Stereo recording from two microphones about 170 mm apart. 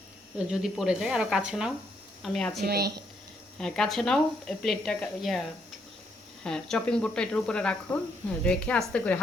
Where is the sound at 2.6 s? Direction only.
70° right (ahead or behind).